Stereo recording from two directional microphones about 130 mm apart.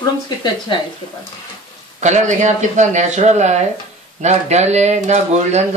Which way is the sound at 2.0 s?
65° right (ahead or behind).